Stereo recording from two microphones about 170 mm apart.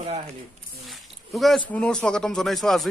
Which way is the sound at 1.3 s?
Centre (ahead or behind).